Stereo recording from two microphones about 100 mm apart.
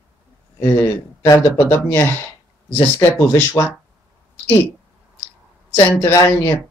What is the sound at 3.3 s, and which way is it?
Speech, 25° left (ahead or behind).